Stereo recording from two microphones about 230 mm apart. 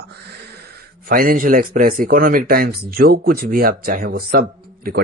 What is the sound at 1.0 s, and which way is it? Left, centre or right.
A man's voice, right.